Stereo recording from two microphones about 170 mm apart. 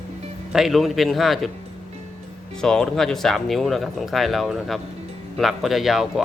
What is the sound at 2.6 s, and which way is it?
Speech, 5° left (ahead or behind).